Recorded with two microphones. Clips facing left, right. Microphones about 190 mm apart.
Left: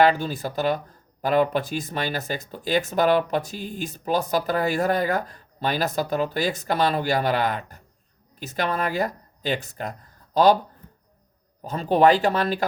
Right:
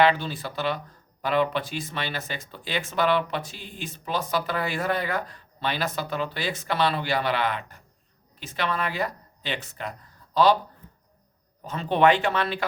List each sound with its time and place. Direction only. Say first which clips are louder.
0.0 s speech: left 2 dB; 45° left (ahead or behind)
11.6 s speech: left 3 dB; 40° left (ahead or behind)